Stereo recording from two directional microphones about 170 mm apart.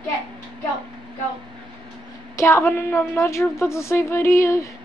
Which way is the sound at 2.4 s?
15° left (ahead or behind).